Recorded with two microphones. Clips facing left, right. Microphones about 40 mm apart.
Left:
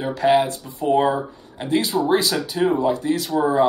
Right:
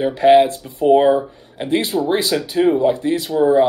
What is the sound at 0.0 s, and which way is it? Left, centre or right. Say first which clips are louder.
Speech: right 6 dB; right.